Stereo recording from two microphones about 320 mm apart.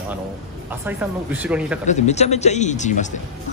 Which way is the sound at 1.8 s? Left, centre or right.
Left.